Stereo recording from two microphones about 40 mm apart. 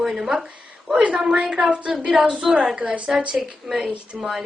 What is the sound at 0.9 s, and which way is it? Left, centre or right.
A woman's voice, right.